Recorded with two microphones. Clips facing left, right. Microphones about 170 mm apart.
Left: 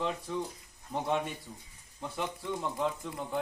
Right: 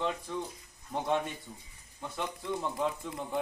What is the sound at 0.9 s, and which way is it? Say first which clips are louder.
Speech: right 1 dB; centre (ahead or behind).